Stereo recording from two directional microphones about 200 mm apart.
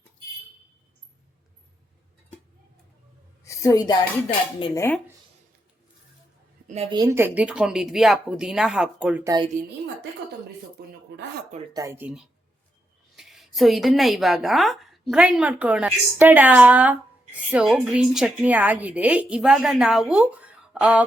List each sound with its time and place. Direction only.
3.4 s speech: 15° left (ahead or behind)
6.9 s a woman's voice: 15° right (ahead or behind)
10.8 s speech: 50° right (ahead or behind)
11.7 s a woman's voice: 15° right (ahead or behind)